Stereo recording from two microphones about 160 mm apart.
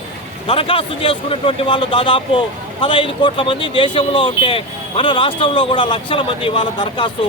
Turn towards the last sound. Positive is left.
turn(degrees=30)  # may be behind; listen again after turning